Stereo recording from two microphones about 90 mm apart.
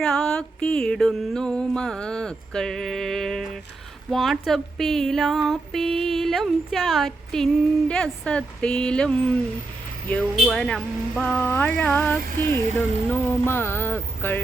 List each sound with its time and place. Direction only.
0.0 s music: 5° left (ahead or behind)
4.1 s speech: centre (ahead or behind)
10.3 s music: 5° left (ahead or behind); by 12.6 s 25° left (ahead or behind)
13.2 s a sound: 25° left (ahead or behind)